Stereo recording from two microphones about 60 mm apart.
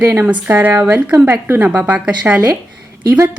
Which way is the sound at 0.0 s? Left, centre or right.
Right.